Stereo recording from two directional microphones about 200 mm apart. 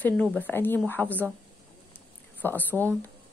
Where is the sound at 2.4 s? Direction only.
10° left (ahead or behind).